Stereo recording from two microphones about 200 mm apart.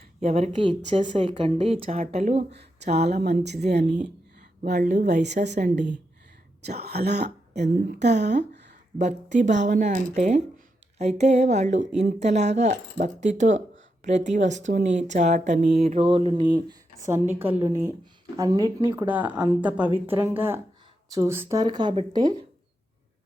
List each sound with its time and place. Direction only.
0.2 s speech: 35° right (ahead or behind); by 3.6 s 55° right (ahead or behind)
4.6 s speech: 40° right (ahead or behind)
6.7 s speech: 55° right (ahead or behind)
9.0 s a woman's voice: 35° right (ahead or behind); by 22.4 s 20° right (ahead or behind)